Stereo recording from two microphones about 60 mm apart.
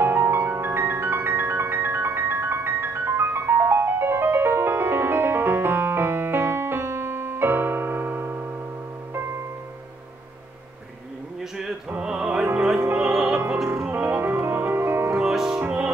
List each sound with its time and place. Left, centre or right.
0.0 s music: right
12.0 s music: centre
13.8 s music: right
15.1 s music: centre
15.6 s music: right